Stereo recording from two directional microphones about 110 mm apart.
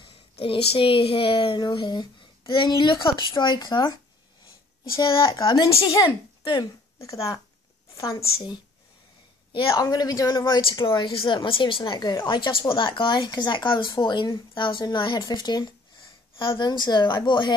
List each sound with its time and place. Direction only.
0.0 s a woman's voice: 55° left (ahead or behind)
5.0 s a woman's voice: 45° left (ahead or behind)
7.0 s speech: 30° left (ahead or behind)
9.7 s speech: 35° left (ahead or behind)
10.6 s a woman's voice: 50° left (ahead or behind)